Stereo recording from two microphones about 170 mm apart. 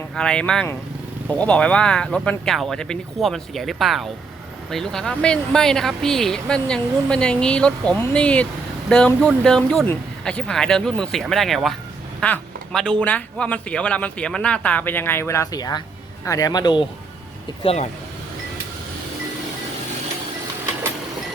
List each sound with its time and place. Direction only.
0.1 s speech: 5° left (ahead or behind); by 16.8 s 25° left (ahead or behind)
17.6 s speech: 35° left (ahead or behind)